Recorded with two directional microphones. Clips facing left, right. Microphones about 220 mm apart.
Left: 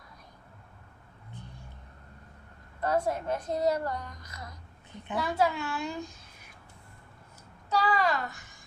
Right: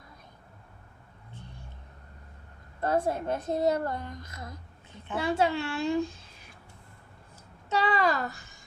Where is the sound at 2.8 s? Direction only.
30° right (ahead or behind).